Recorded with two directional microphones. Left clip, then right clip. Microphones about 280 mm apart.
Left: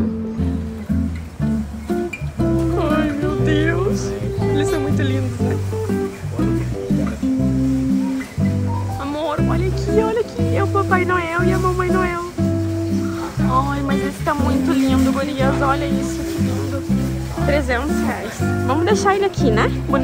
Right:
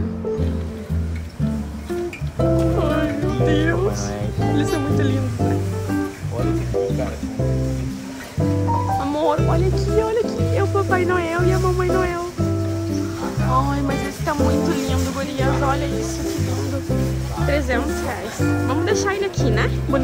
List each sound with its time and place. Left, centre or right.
2.8 s music: centre
9.0 s music: centre
13.5 s music: centre
17.5 s speech: centre